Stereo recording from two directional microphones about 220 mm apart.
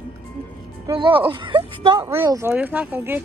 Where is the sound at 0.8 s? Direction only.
20° right (ahead or behind).